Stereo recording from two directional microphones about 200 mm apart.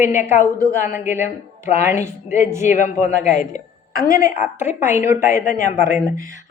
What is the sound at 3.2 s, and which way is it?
Speech, 35° left (ahead or behind).